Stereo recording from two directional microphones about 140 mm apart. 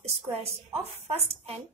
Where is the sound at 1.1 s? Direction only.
45° right (ahead or behind).